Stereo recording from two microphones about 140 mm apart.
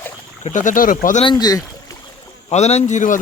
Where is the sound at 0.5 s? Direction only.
70° left (ahead or behind).